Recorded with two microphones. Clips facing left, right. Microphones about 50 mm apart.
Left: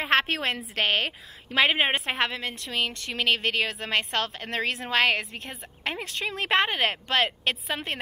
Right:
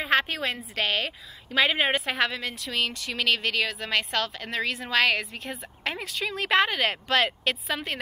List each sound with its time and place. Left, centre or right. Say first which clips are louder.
0.0 s a sound: left 1 dB; left
0.7 s speech: left 2 dB; left
1.8 s speech: even; centre
5.2 s a woman's voice: right 2 dB; centre
6.2 s a woman's voice: right 1 dB; centre
7.4 s speech: even; left